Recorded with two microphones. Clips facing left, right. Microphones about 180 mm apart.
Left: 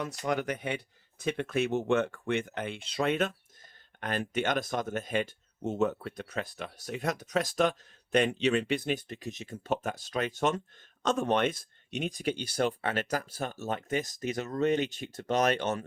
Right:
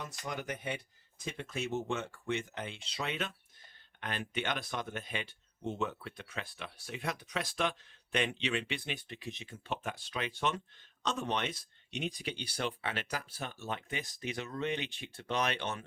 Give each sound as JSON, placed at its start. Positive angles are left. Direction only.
{"t": 0.0, "sound": "speech", "side_deg": 70}